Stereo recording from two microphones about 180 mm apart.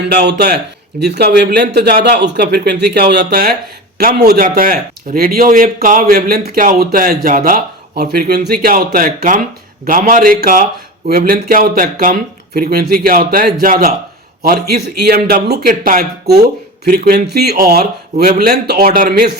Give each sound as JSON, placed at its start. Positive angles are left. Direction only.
{"t": 0.1, "sound": "speech", "side_deg": -65}